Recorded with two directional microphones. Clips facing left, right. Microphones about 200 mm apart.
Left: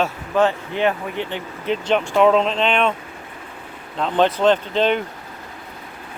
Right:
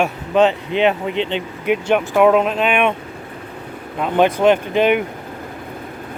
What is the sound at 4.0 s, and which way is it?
Speech, 10° right (ahead or behind).